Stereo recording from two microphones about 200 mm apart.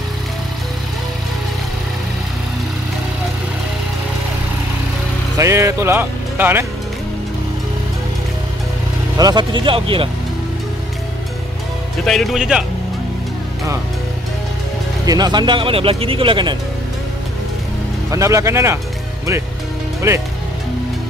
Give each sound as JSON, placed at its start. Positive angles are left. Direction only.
{"t": 5.4, "sound": "speech", "side_deg": -15}
{"t": 9.1, "sound": "speech", "side_deg": -20}
{"t": 12.0, "sound": "speech", "side_deg": 0}
{"t": 15.0, "sound": "speech", "side_deg": -20}
{"t": 18.1, "sound": "speech", "side_deg": -15}